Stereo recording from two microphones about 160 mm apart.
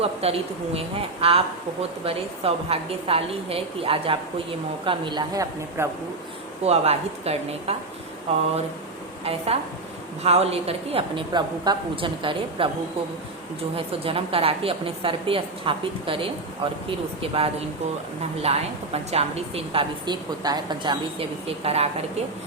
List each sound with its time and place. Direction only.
0.0 s a woman's voice: 40° right (ahead or behind); by 5.9 s 20° right (ahead or behind)
6.6 s speech: 40° right (ahead or behind)
9.2 s speech: 40° right (ahead or behind)
13.7 s speech: 35° right (ahead or behind)